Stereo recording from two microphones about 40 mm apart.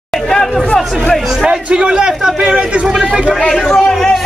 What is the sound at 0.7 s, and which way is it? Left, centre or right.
Speech, centre.